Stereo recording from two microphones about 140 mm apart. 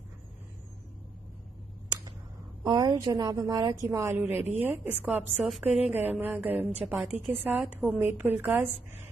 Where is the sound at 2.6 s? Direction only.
30° right (ahead or behind).